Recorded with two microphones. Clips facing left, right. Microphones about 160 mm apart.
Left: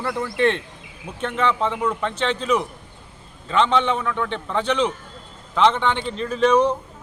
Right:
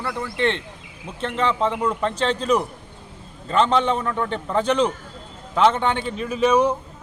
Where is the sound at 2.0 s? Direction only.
35° right (ahead or behind).